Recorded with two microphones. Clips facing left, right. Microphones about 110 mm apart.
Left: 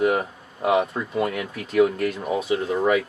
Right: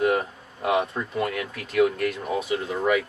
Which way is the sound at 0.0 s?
15° left (ahead or behind).